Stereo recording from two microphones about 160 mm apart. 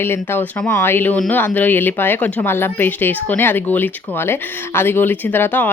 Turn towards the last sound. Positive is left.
turn(degrees=10)  # may be behind; listen again after turning